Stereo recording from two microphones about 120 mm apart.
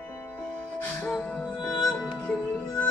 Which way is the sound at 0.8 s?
5° left (ahead or behind).